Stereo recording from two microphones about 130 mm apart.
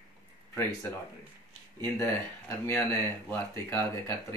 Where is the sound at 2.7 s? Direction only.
15° left (ahead or behind).